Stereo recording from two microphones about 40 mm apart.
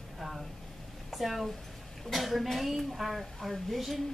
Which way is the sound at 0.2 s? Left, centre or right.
Centre.